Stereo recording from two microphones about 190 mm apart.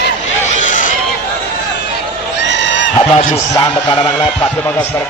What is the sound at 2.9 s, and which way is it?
Speech, 35° left (ahead or behind).